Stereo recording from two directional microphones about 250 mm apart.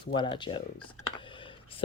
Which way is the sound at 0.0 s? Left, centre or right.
Centre.